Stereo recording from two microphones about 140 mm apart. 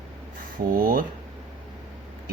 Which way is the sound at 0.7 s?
90° right.